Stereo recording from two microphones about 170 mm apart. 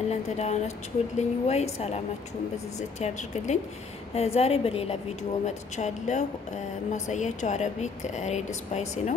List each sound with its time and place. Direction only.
0.1 s a woman's voice: 40° left (ahead or behind)
3.0 s a woman's voice: 45° left (ahead or behind)